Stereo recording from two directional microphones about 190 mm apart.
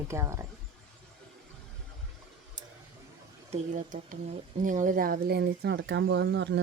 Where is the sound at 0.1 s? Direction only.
15° right (ahead or behind).